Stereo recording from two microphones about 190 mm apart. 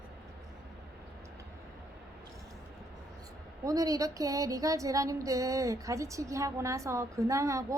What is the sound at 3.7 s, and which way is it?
Speech, 20° right (ahead or behind).